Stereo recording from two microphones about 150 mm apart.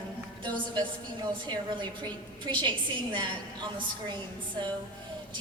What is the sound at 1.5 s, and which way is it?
A woman's voice, 30° right (ahead or behind).